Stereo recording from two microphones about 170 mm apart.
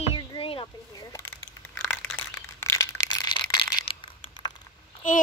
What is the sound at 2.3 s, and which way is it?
Crushing, 15° left (ahead or behind).